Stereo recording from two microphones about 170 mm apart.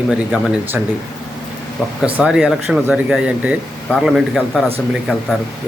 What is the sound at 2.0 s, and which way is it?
Speech, 5° right (ahead or behind).